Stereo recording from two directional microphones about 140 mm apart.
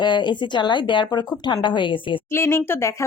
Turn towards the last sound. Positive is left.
turn(degrees=20)  # may be behind; listen again after turning